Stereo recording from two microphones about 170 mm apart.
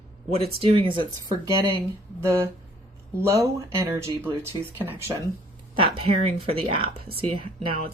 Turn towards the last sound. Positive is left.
turn(degrees=-30)  # may be behind; listen again after turning